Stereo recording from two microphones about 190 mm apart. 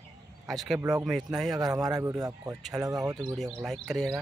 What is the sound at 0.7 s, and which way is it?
Speech, 20° right (ahead or behind).